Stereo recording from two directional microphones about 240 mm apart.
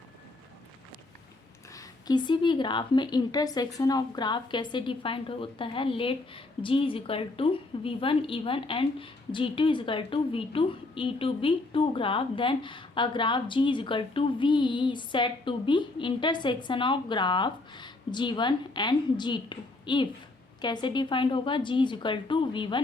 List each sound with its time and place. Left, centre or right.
1.7 s speech: centre